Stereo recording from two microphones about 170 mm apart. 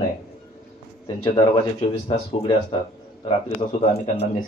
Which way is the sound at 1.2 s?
25° left (ahead or behind).